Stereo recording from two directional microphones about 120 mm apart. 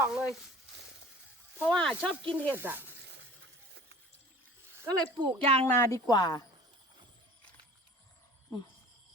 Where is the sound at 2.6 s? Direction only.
15° right (ahead or behind).